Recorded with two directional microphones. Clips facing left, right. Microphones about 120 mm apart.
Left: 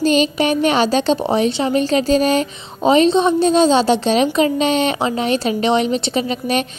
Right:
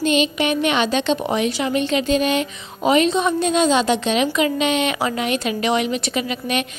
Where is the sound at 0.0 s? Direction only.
35° left (ahead or behind).